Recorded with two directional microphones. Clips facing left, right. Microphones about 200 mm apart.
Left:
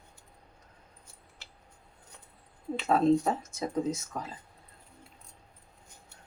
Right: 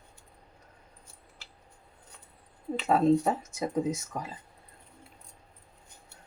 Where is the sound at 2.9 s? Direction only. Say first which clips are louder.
Right 1 dB; 10° right (ahead or behind).